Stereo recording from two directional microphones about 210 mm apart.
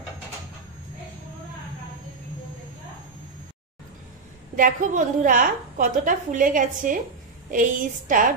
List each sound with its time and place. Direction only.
4.6 s a woman's voice: 40° right (ahead or behind)